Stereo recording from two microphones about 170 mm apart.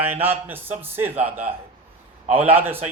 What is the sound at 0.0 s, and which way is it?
A man's voice, 10° right (ahead or behind).